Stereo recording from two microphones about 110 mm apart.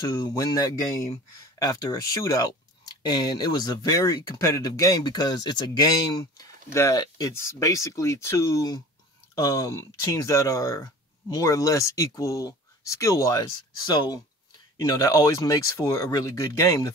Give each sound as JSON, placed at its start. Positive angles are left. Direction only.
{"t": 0.0, "sound": "speech", "side_deg": 40}
{"t": 6.3, "sound": "speech", "side_deg": 30}